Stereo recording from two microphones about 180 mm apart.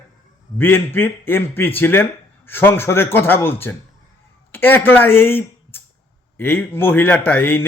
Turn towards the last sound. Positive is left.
turn(degrees=10)  # may be behind; listen again after turning